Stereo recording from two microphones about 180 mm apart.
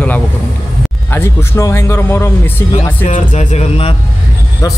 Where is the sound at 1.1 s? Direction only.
15° left (ahead or behind).